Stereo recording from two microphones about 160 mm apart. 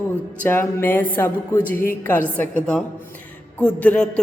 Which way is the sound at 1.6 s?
60° left (ahead or behind).